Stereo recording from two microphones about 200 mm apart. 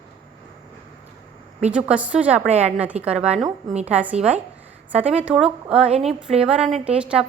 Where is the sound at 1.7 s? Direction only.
5° right (ahead or behind).